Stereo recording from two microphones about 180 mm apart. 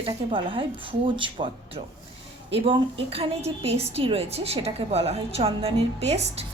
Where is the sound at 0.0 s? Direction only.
30° right (ahead or behind).